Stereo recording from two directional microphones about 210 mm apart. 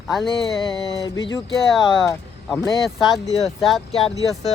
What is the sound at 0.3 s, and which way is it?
Speech, 25° left (ahead or behind).